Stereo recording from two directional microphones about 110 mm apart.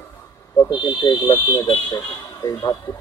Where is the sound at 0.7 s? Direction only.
40° left (ahead or behind).